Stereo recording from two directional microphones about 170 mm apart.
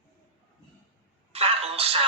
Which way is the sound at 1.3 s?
35° right (ahead or behind).